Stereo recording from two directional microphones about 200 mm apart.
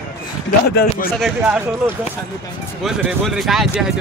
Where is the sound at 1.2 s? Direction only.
5° right (ahead or behind).